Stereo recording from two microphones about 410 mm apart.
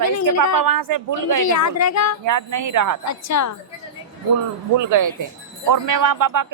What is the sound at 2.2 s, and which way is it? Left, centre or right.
Speech, right.